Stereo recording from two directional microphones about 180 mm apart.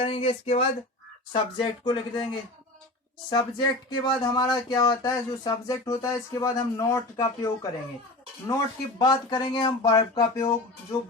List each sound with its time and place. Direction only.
0.0 s a sound: 30° left (ahead or behind)
1.3 s speech: 25° left (ahead or behind)
9.0 s speech: 25° left (ahead or behind)